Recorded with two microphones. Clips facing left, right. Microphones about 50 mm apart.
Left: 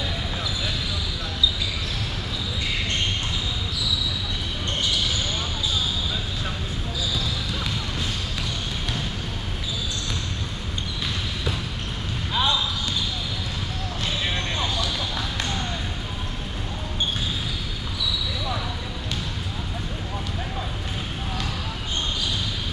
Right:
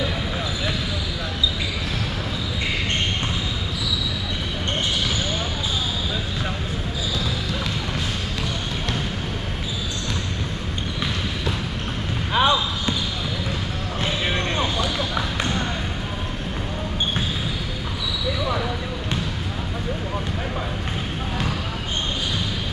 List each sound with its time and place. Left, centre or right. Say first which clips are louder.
12.4 s basketball bounce: right 4 dB; right
14.0 s basketball bounce: right 4 dB; right